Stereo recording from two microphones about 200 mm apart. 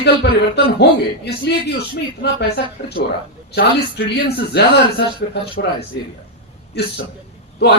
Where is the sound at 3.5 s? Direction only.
55° left (ahead or behind).